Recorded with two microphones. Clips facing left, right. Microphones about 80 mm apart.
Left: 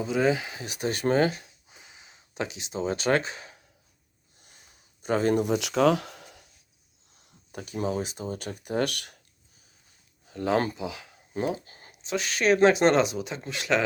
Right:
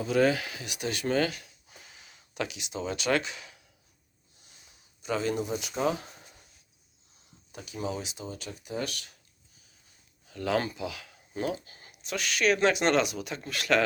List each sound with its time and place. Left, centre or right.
0.0 s speech: centre
0.6 s speech: left
1.7 s a sound: centre; by 3.6 s left
4.4 s a sound: left
7.5 s speech: left
10.2 s speech: left